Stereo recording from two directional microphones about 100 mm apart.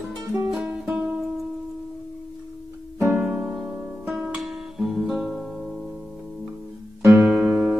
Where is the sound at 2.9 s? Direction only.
20° right (ahead or behind).